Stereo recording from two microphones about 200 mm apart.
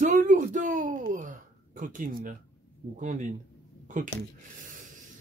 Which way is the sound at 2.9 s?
40° right (ahead or behind).